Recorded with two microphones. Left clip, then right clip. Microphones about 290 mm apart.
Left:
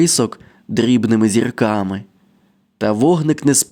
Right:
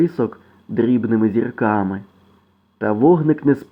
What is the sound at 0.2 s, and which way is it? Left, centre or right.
Speech, left.